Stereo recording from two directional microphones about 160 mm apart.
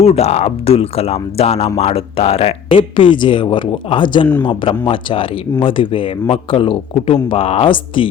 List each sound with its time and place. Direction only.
0.0 s speech: 40° left (ahead or behind)